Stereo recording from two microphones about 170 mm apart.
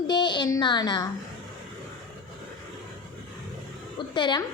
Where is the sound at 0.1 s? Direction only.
25° left (ahead or behind).